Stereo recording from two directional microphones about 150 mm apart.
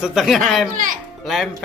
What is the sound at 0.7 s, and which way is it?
Speech, 65° right (ahead or behind).